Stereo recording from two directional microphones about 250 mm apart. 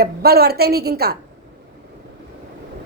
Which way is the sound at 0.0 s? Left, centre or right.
Right.